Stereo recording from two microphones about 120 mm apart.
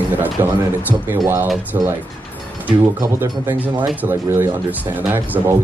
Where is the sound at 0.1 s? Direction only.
15° right (ahead or behind).